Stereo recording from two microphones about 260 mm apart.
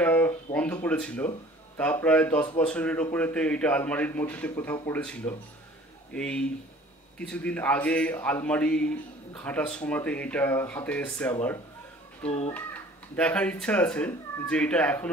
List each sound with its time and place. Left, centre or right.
0.0 s a sound: centre
1.8 s a man's voice: centre
12.3 s a child's voice: left
13.1 s a man's voice: centre